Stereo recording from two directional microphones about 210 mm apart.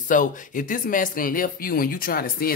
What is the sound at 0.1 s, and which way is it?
A woman's voice, 40° left (ahead or behind).